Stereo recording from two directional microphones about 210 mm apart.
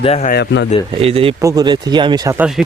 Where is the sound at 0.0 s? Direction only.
30° left (ahead or behind).